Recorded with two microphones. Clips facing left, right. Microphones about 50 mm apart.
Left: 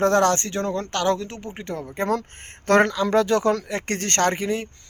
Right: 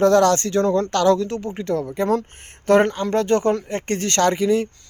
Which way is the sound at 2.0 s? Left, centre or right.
Left.